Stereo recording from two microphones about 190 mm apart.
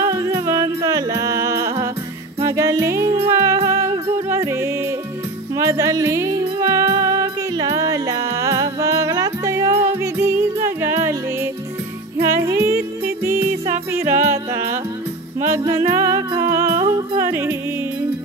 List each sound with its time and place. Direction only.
0.0 s music: 15° right (ahead or behind)
12.2 s music: 15° right (ahead or behind)